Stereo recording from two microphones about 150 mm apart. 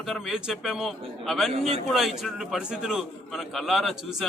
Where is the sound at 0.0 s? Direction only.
Centre (ahead or behind).